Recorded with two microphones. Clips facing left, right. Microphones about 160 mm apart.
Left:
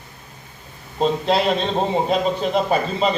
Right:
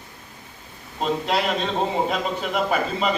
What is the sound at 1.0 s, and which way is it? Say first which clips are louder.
A man's voice: left 5 dB; 30° left (ahead or behind).